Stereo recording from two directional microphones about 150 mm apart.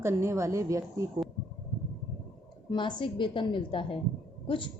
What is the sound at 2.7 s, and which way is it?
A woman's voice, 30° left (ahead or behind).